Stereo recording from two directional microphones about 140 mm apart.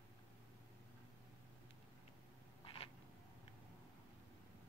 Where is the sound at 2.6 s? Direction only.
40° left (ahead or behind).